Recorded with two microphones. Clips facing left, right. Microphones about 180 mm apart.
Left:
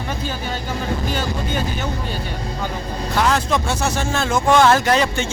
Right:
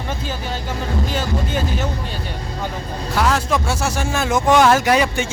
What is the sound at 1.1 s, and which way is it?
Speech, centre (ahead or behind).